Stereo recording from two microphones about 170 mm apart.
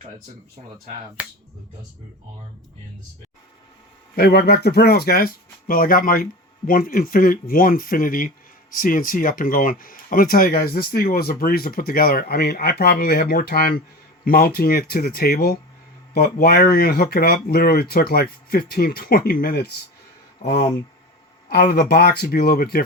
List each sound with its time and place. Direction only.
1.2 s speech: 10° right (ahead or behind)
4.1 s speech: 65° left (ahead or behind)
21.5 s speech: 65° left (ahead or behind)